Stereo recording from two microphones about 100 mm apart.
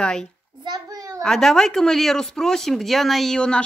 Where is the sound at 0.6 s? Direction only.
40° right (ahead or behind).